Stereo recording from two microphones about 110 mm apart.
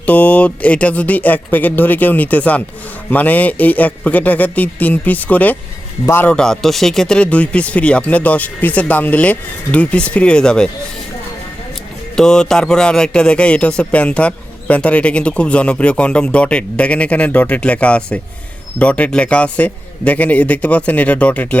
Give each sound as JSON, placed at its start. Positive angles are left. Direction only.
{"t": 0.0, "sound": "a man's voice", "side_deg": 15}
{"t": 6.3, "sound": "speech", "side_deg": 5}
{"t": 12.1, "sound": "speech", "side_deg": 5}